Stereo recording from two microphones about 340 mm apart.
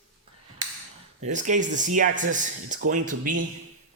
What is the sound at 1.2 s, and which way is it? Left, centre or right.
Speech, right.